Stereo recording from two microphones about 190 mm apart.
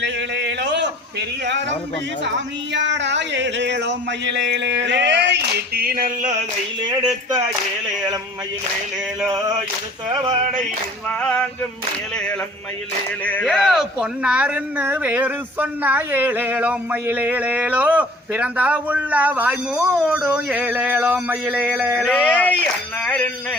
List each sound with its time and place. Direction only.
0.0 s a sound: 65° right (ahead or behind)
2.2 s speech: 70° right (ahead or behind); by 6.4 s 45° right (ahead or behind)
6.8 s speech: 20° right (ahead or behind)
11.2 s male singing: 5° left (ahead or behind)
13.2 s speech: 5° left (ahead or behind)
22.1 s speech: 5° left (ahead or behind)